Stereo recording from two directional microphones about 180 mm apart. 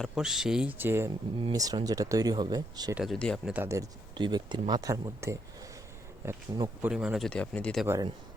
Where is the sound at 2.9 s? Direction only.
Centre (ahead or behind).